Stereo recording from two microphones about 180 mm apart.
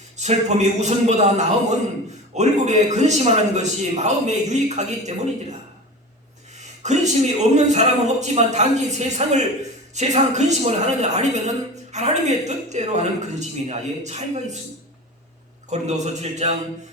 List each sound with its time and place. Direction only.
0.2 s a woman's voice: 40° right (ahead or behind)
6.6 s a woman's voice: 40° right (ahead or behind)
15.7 s a woman's voice: 40° right (ahead or behind)